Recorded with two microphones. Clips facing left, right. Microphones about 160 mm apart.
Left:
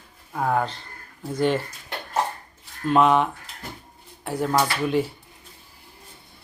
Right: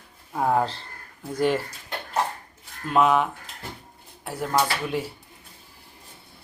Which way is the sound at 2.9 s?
5° right (ahead or behind).